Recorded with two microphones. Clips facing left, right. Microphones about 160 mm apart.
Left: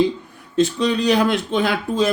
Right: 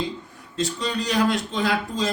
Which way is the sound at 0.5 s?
60° left (ahead or behind).